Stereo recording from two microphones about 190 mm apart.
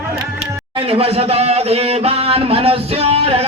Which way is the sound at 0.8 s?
30° right (ahead or behind).